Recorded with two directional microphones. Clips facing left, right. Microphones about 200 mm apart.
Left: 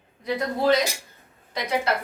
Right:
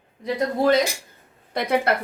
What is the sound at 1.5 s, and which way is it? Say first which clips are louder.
Speech: right 4 dB; 55° right (ahead or behind).